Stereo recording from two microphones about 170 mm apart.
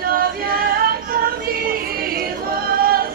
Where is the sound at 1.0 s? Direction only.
60° right (ahead or behind).